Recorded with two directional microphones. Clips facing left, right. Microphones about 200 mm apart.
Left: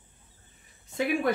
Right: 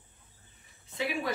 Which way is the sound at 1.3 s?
55° left (ahead or behind).